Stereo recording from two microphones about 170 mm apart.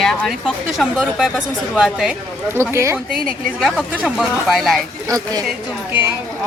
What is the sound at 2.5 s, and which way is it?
A woman's voice, 15° right (ahead or behind).